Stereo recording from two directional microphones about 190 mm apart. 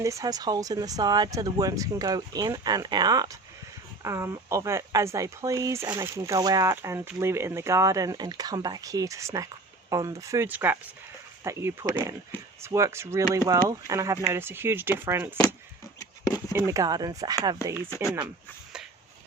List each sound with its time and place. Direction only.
0.0 s speech: 15° right (ahead or behind)
16.5 s speech: 15° right (ahead or behind)